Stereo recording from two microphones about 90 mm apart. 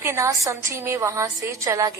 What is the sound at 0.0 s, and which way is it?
A woman's voice, 30° right (ahead or behind).